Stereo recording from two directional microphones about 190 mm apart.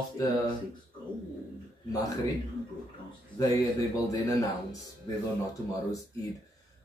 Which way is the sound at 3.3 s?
20° left (ahead or behind).